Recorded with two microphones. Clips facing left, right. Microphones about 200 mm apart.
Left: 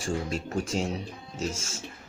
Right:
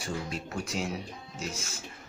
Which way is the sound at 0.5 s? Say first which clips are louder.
Left 5 dB; 30° left (ahead or behind).